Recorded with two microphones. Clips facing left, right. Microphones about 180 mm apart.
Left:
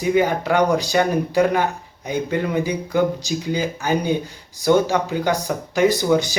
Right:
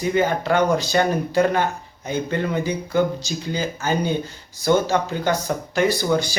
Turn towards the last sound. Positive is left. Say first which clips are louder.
# left 3 dB
turn(degrees=20)  # may be behind; listen again after turning